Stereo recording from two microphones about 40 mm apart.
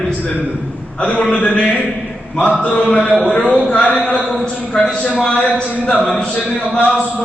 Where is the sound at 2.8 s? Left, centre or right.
Left.